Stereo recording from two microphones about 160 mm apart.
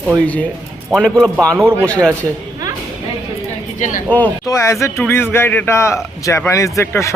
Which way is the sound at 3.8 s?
50° left (ahead or behind).